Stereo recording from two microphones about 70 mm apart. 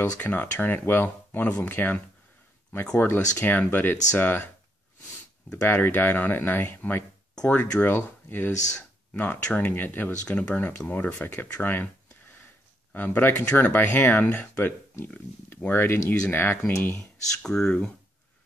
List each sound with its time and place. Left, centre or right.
0.0 s speech: left
3.1 s speech: left
5.5 s speech: left
10.2 s speech: centre
12.9 s speech: left
17.4 s speech: centre